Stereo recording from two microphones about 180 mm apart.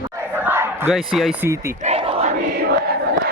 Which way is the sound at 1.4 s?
15° right (ahead or behind).